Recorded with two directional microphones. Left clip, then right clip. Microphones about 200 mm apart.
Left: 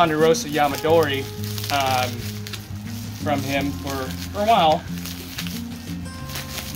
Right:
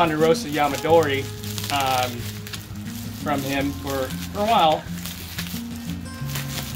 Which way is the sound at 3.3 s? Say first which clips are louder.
Left 1 dB; 30° left (ahead or behind).